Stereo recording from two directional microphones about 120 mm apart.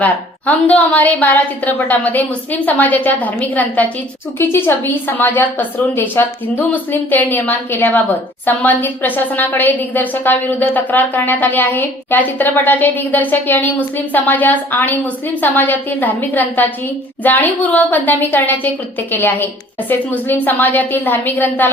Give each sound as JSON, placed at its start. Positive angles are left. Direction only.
{"t": 0.0, "sound": "a woman's voice", "side_deg": 15}